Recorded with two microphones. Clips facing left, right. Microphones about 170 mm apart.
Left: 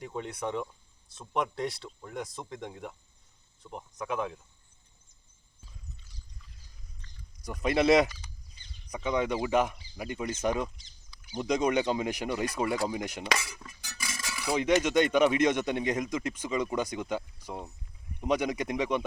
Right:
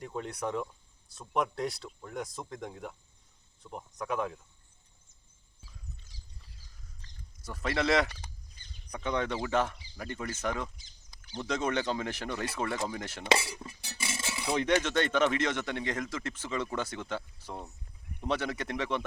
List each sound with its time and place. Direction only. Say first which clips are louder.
0.0 s speech: left 1 dB; centre (ahead or behind)
6.1 s a sound: left 1 dB; 90° right
7.4 s speech: left 5 dB; 20° left (ahead or behind)
8.9 s speech: left 3 dB; 10° left (ahead or behind)
13.2 s cutlery: right 4 dB; 30° right (ahead or behind)
14.5 s speech: left 3 dB; 10° left (ahead or behind)